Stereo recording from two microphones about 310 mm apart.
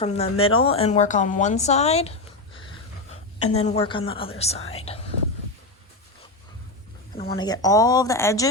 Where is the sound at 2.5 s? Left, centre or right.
Centre.